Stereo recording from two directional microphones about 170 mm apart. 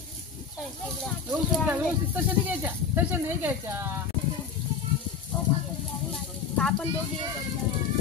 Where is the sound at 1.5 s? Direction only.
10° right (ahead or behind).